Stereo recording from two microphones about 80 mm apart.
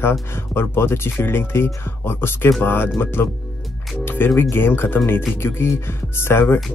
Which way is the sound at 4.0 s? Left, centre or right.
Left.